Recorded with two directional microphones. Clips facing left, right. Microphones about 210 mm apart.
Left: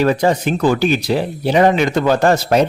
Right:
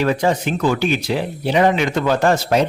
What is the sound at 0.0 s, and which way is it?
Speech, 40° left (ahead or behind).